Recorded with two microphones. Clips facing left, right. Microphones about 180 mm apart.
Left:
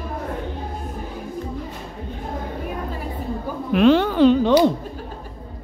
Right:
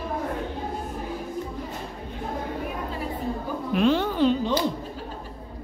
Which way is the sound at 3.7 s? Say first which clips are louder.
Left 7 dB; 80° left.